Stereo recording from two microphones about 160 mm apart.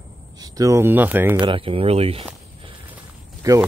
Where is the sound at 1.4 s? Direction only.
35° right (ahead or behind).